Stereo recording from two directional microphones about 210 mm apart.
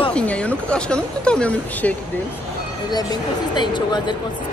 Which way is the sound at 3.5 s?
20° left (ahead or behind).